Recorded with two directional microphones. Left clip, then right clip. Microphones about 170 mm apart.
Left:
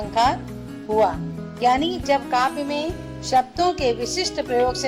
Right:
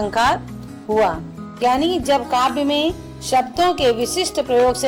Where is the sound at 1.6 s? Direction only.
25° right (ahead or behind).